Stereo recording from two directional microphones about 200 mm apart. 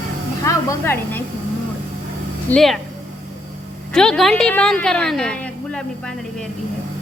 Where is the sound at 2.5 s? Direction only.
Centre (ahead or behind).